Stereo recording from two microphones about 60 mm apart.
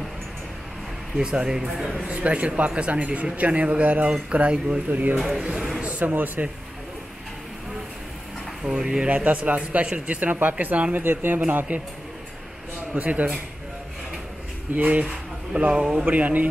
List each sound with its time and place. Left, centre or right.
1.1 s a man's voice: centre
5.4 s a sound: centre
5.9 s speech: right
8.6 s a man's voice: centre
12.9 s a man's voice: right
14.8 s a man's voice: right
15.7 s speech: centre
16.1 s a man's voice: right